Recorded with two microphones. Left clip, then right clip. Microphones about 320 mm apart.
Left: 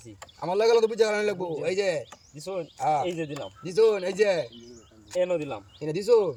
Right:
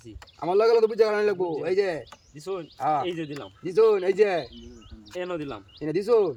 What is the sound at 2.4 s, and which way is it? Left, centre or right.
Speech, centre.